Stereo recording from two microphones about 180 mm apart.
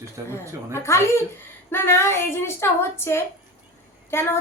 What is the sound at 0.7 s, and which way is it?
A woman's voice, 15° left (ahead or behind).